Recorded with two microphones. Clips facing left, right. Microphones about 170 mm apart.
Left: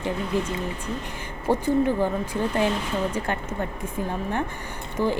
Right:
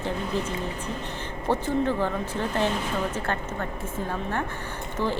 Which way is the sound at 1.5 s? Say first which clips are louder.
Left 3 dB; 15° left (ahead or behind).